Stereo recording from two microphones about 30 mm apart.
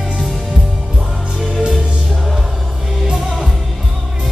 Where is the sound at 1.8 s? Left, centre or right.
Right.